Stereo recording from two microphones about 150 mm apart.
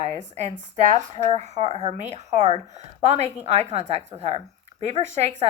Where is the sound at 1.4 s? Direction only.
50° right (ahead or behind).